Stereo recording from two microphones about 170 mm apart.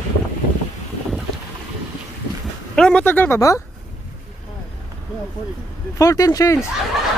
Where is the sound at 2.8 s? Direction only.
5° left (ahead or behind).